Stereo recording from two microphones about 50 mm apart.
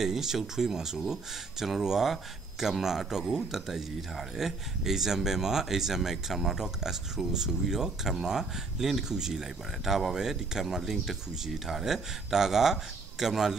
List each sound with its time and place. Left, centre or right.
0.0 s speech: centre